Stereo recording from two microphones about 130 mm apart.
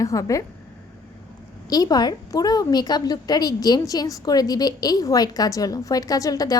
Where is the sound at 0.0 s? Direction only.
25° left (ahead or behind).